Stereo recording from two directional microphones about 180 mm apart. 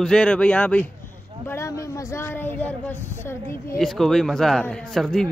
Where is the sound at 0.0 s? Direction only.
5° left (ahead or behind).